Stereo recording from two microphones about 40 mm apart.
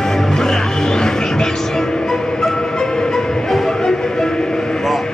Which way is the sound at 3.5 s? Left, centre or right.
Centre.